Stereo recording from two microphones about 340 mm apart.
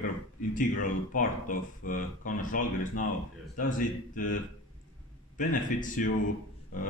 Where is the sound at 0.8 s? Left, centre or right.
Left.